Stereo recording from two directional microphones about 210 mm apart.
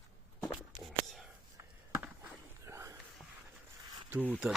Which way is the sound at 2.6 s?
15° right (ahead or behind).